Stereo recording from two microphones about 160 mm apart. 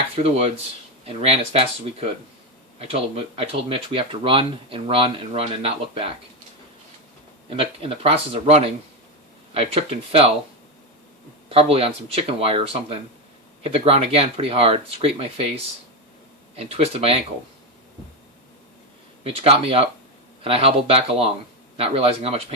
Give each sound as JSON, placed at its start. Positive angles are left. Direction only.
{"t": 0.2, "sound": "speech", "side_deg": -40}
{"t": 7.5, "sound": "speech", "side_deg": -35}
{"t": 11.4, "sound": "speech", "side_deg": -35}
{"t": 16.6, "sound": "speech", "side_deg": -40}
{"t": 19.2, "sound": "speech", "side_deg": -35}